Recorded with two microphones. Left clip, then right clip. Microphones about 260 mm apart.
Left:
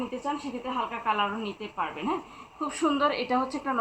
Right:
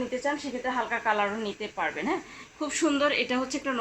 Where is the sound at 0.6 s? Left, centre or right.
Right.